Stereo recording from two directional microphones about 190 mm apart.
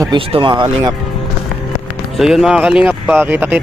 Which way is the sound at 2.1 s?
Centre (ahead or behind).